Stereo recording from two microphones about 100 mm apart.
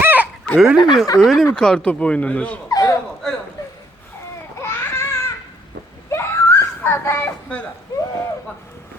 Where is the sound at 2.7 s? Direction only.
35° left (ahead or behind); by 7.2 s 20° left (ahead or behind).